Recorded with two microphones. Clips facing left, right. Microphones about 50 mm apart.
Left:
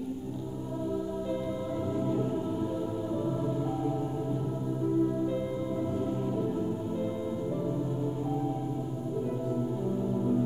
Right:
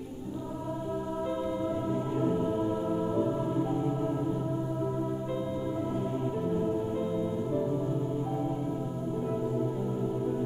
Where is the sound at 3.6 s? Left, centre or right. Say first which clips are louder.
Right 1 dB; centre.